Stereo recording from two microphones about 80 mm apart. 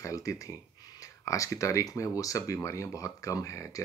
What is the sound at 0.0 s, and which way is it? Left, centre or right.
Speech, left.